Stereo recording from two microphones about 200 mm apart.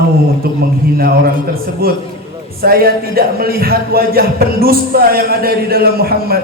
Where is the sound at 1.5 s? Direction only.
50° right (ahead or behind).